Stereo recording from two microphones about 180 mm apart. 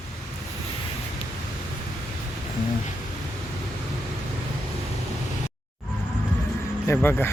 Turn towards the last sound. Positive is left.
turn(degrees=10)  # may be behind; listen again after turning